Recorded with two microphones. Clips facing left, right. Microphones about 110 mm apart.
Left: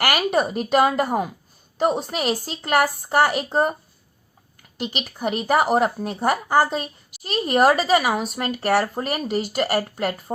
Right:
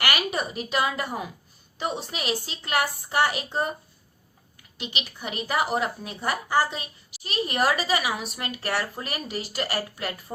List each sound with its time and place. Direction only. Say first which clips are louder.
0.0 s a woman's voice: left 7 dB; 45° left (ahead or behind)
4.8 s a woman's voice: left 8 dB; 45° left (ahead or behind)